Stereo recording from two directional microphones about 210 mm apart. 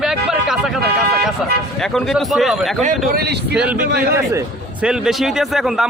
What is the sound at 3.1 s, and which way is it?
Speech, 50° right (ahead or behind).